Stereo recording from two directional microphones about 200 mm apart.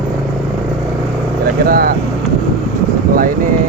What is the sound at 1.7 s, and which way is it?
Speech, 45° right (ahead or behind).